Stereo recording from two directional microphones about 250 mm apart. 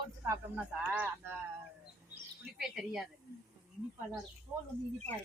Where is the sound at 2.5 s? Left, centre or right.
Centre.